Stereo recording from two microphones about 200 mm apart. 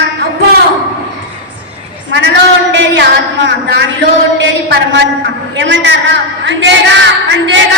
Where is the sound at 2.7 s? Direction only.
60° right (ahead or behind).